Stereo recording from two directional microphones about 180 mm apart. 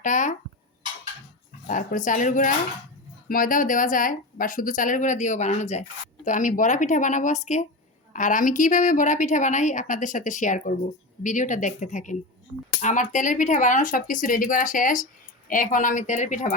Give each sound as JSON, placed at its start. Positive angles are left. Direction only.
{"t": 0.0, "sound": "a woman's voice", "side_deg": 45}
{"t": 1.6, "sound": "a woman's voice", "side_deg": 45}